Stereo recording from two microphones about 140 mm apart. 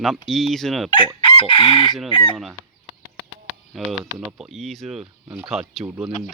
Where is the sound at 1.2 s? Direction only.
40° left (ahead or behind).